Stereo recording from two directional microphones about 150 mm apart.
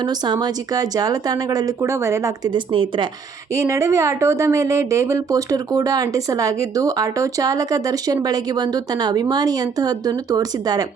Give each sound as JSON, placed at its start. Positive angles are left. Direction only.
{"t": 0.0, "sound": "speech", "side_deg": -30}
{"t": 3.5, "sound": "speech", "side_deg": -20}